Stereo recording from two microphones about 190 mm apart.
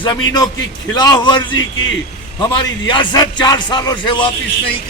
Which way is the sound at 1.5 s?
90° left.